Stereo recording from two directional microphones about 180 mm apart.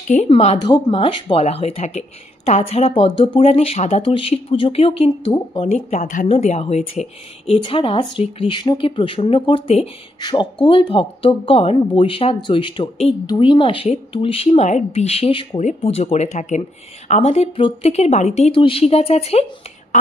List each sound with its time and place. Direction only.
0.1 s speech: 35° left (ahead or behind)
0.7 s speech: 25° left (ahead or behind)